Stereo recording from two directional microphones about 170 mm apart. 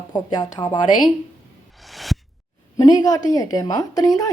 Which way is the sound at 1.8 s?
Centre (ahead or behind).